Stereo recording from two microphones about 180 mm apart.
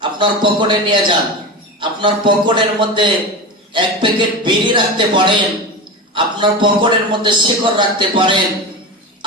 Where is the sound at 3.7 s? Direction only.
25° right (ahead or behind).